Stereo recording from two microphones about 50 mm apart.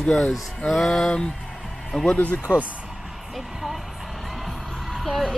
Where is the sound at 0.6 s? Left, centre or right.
Centre.